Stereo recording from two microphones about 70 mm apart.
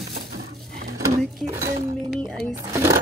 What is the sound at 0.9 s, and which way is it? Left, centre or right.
Sewing machine, right.